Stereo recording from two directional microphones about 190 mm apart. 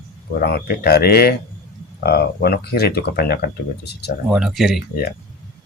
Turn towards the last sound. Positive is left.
turn(degrees=0)  # may be behind; listen again after turning